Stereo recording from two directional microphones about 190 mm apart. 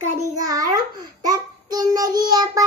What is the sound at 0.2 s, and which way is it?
Speech, 20° right (ahead or behind).